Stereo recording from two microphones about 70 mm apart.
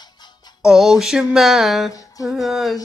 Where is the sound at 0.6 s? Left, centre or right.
Centre.